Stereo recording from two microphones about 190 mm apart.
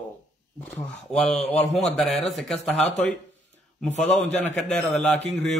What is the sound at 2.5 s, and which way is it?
Speech, 35° left (ahead or behind).